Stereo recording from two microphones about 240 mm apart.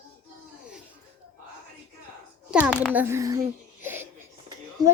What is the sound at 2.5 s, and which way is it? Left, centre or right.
Speech, centre.